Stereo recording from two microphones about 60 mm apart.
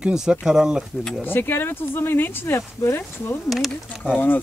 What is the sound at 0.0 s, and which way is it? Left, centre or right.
Speech, centre.